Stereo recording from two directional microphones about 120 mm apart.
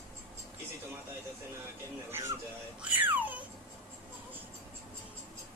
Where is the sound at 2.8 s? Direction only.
15° right (ahead or behind).